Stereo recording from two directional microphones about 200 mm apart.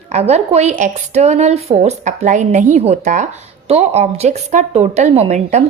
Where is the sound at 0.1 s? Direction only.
30° right (ahead or behind).